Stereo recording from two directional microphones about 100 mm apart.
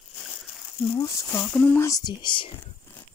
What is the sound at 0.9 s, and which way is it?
Speech, 30° left (ahead or behind).